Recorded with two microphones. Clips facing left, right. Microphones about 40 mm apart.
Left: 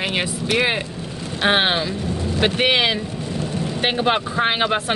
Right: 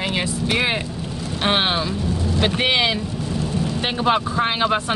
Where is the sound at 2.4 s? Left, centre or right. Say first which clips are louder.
Left 2 dB; left.